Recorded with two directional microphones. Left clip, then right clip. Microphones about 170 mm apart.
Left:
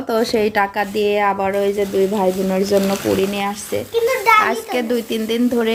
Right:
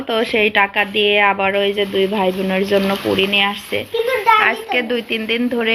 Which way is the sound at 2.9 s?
5° right (ahead or behind).